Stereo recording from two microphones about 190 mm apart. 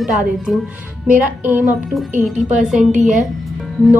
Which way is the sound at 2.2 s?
Centre (ahead or behind).